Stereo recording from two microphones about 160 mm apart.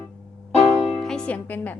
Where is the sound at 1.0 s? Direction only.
5° left (ahead or behind).